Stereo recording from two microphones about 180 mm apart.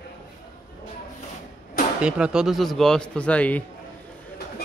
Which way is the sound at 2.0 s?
5° right (ahead or behind).